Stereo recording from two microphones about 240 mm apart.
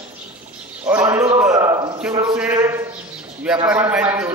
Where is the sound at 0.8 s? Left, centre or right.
Centre.